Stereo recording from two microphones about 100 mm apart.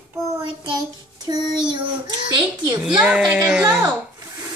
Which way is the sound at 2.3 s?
45° right (ahead or behind).